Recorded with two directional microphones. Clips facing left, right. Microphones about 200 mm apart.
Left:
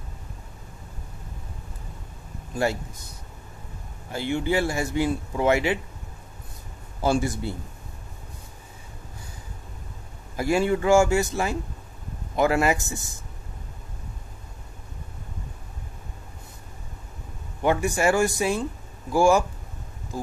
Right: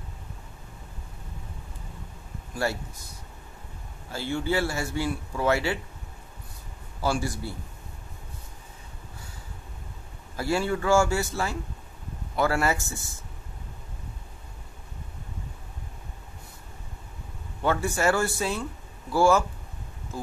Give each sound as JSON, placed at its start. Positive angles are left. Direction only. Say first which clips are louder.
{"t": 2.5, "sound": "speech", "louder": "left 4 dB", "side_deg": 20}
{"t": 4.1, "sound": "speech", "louder": "left 3 dB", "side_deg": 20}
{"t": 7.0, "sound": "a man's voice", "louder": "left 4 dB", "side_deg": 20}
{"t": 10.3, "sound": "speech", "louder": "left 4 dB", "side_deg": 15}
{"t": 17.6, "sound": "speech", "louder": "left 3 dB", "side_deg": 15}